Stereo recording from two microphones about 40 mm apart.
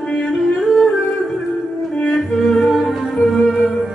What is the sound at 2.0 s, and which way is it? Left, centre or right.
Music, left.